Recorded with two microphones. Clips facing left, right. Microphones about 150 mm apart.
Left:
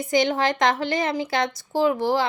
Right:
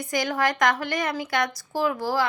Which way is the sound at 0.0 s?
25° left (ahead or behind).